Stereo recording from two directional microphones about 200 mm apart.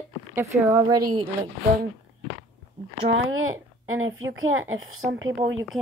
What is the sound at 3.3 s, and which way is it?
A woman's voice, 90° right.